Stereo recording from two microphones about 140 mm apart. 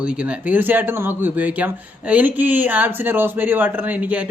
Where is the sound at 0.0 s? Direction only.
10° right (ahead or behind).